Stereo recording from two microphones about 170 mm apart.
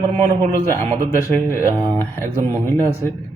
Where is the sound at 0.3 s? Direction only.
45° right (ahead or behind).